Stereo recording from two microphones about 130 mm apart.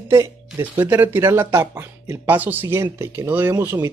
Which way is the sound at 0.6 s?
15° right (ahead or behind).